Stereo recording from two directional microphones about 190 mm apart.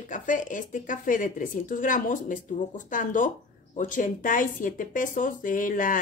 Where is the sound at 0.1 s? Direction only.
45° left (ahead or behind).